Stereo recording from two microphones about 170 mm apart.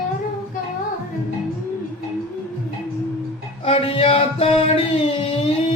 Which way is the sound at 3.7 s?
35° left (ahead or behind).